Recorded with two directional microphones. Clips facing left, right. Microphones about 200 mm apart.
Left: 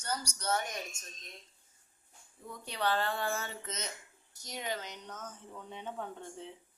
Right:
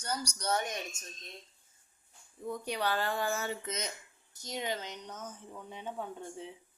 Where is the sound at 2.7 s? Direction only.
10° right (ahead or behind).